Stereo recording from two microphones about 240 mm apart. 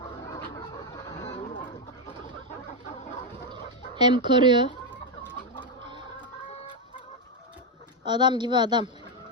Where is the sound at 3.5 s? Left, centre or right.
Centre.